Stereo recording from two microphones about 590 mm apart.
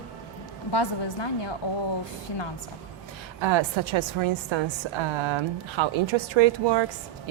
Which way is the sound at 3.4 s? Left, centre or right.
Right.